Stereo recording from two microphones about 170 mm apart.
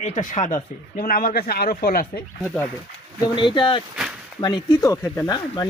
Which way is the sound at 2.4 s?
10° left (ahead or behind).